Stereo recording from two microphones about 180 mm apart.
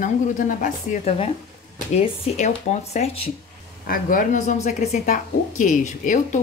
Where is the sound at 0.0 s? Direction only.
50° left (ahead or behind).